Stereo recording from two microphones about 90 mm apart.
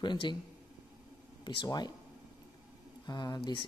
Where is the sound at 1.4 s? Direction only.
55° left (ahead or behind).